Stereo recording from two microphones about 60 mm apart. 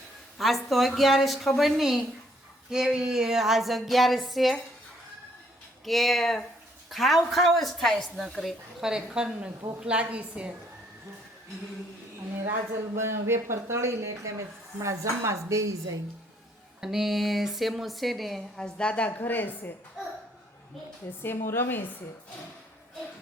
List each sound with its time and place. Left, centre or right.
0.3 s a sound: centre
5.8 s a sound: centre
8.3 s a woman's voice: centre
8.8 s a woman's voice: centre
13.0 s speech: right
16.8 s a sound: centre
18.6 s a woman's voice: centre
19.1 s a woman's voice: left
21.2 s a woman's voice: left